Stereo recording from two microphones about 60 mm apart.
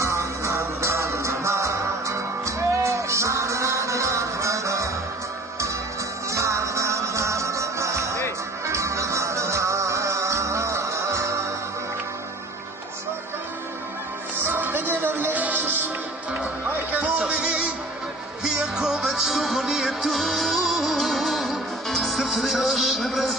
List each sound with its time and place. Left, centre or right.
0.0 s music: right
6.3 s music: right
14.3 s music: right
17.2 s music: centre